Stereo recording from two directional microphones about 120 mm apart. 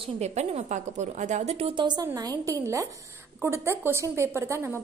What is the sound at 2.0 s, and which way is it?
A woman's voice, 30° right (ahead or behind).